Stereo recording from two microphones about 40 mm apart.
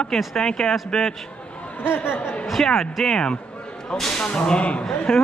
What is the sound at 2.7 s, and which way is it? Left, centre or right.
Speech, centre.